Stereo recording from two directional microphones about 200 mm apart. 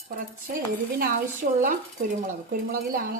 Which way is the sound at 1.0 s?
45° right (ahead or behind).